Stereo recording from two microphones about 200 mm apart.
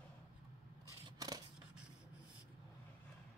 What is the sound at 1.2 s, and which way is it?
Scissors, 20° right (ahead or behind).